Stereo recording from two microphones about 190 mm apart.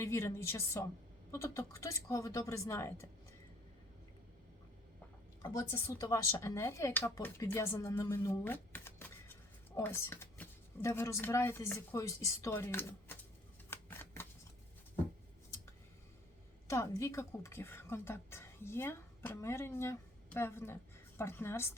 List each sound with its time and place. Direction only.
0.0 s speech: 15° left (ahead or behind)
5.4 s speech: 15° left (ahead or behind)
13.7 s shuffling cards: 10° left (ahead or behind)
16.6 s speech: 15° left (ahead or behind)